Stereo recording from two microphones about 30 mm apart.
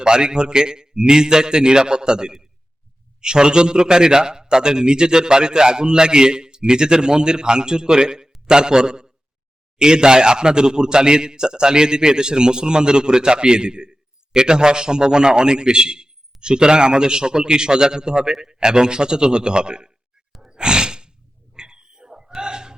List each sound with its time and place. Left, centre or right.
0.0 s a man's voice: right
20.5 s sigh: right
21.5 s pig: right
22.4 s a sound: right